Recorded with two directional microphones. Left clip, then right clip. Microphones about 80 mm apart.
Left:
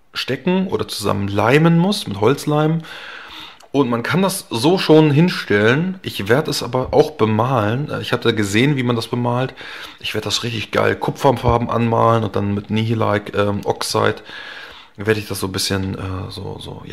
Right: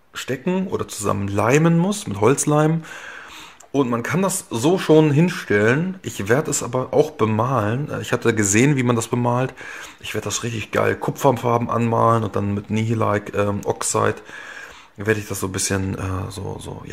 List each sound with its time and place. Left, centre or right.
0.1 s speech: centre
1.6 s speech: centre
2.3 s speech: centre
3.7 s speech: centre
4.0 s speech: centre
6.7 s speech: centre
8.0 s speech: centre
10.0 s speech: centre
15.9 s speech: centre